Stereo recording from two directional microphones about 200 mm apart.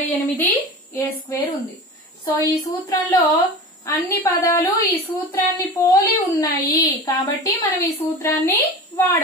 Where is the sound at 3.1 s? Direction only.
15° left (ahead or behind).